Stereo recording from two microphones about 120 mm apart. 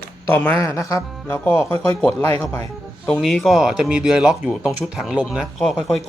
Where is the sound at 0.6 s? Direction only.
30° left (ahead or behind).